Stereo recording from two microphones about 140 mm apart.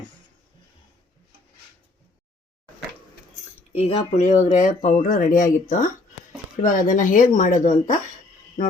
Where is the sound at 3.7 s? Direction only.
50° left (ahead or behind).